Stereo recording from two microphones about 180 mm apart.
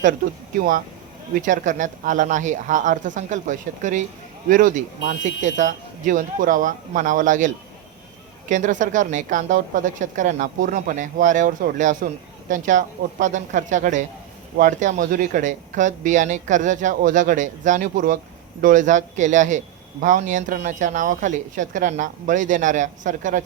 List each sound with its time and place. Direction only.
1.4 s a man's voice: 45° right (ahead or behind)